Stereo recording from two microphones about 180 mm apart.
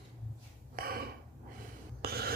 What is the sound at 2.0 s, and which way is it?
Rub, 60° right (ahead or behind).